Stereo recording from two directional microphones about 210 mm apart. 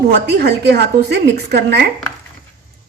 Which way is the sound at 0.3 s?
50° right (ahead or behind).